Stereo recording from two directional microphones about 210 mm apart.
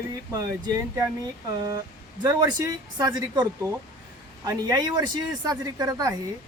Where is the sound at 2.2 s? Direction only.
15° right (ahead or behind).